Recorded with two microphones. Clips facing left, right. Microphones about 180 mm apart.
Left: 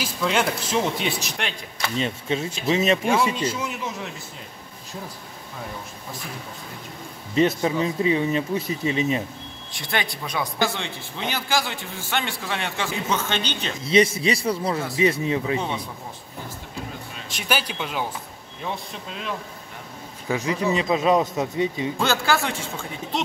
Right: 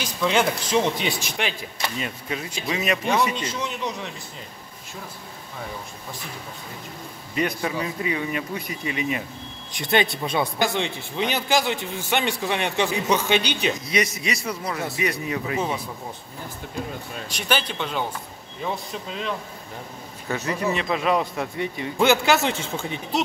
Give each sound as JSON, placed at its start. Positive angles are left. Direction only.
{"t": 0.0, "sound": "speech", "side_deg": 0}
{"t": 2.0, "sound": "speech", "side_deg": 25}
{"t": 3.4, "sound": "speech", "side_deg": 5}
{"t": 7.3, "sound": "speech", "side_deg": 25}
{"t": 9.7, "sound": "a man's voice", "side_deg": -20}
{"t": 13.8, "sound": "speech", "side_deg": 30}
{"t": 17.3, "sound": "a man's voice", "side_deg": 5}
{"t": 20.2, "sound": "a man's voice", "side_deg": 15}
{"t": 21.9, "sound": "a man's voice", "side_deg": -15}